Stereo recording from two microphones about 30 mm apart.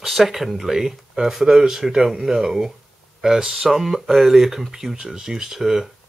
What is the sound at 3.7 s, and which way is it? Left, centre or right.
Speech, centre.